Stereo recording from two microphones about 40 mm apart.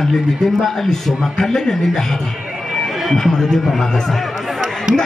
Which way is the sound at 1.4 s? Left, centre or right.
Centre.